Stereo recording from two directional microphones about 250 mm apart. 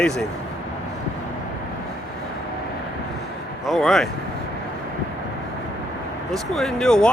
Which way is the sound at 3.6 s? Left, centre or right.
Centre.